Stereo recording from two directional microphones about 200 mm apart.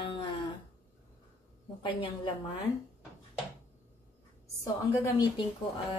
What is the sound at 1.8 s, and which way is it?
Speech, 25° left (ahead or behind).